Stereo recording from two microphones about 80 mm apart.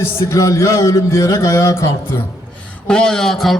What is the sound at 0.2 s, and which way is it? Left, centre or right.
Speech, left.